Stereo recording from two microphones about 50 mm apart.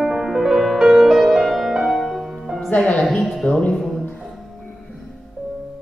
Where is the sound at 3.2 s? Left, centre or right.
Centre.